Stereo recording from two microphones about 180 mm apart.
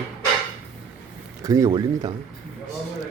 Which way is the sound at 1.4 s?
20° right (ahead or behind).